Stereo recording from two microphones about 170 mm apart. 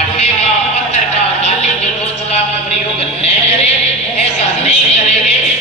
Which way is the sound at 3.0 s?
35° left (ahead or behind).